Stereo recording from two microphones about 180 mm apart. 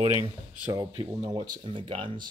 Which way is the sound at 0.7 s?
25° right (ahead or behind).